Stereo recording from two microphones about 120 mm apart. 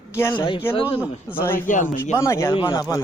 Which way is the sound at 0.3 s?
45° left (ahead or behind).